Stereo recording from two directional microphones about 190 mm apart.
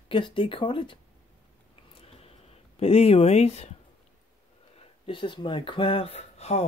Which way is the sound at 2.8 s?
30° left (ahead or behind).